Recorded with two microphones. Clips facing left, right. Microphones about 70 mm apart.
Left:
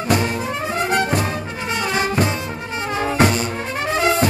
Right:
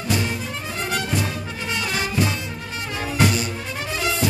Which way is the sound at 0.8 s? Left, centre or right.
Left.